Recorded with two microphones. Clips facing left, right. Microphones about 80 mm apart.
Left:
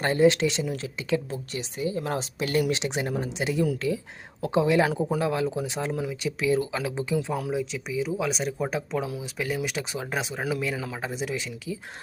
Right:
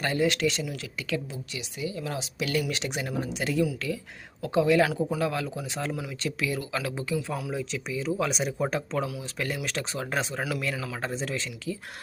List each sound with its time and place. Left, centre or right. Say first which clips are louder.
0.0 s speech: left 5 dB; left
1.3 s speech: left 5 dB; left
2.7 s speech: left 3 dB; left
7.5 s speech: left 3 dB; centre